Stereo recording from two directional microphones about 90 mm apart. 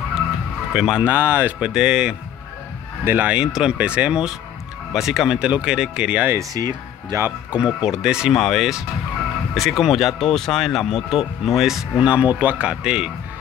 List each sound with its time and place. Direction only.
0.7 s speech: 10° right (ahead or behind)
1.0 s speech: 20° right (ahead or behind)
1.6 s speech: 5° right (ahead or behind)
6.5 s speech: 45° right (ahead or behind)
7.5 s speech: 10° right (ahead or behind)
12.0 s speech: 15° right (ahead or behind)